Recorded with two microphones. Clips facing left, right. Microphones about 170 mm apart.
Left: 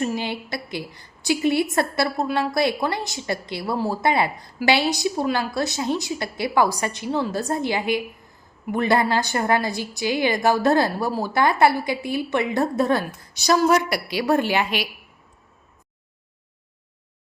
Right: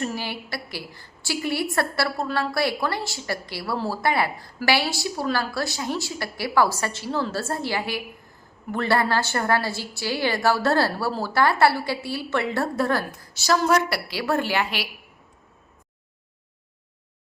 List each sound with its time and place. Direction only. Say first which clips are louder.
0.0 s a woman's voice: left 4 dB; 20° left (ahead or behind)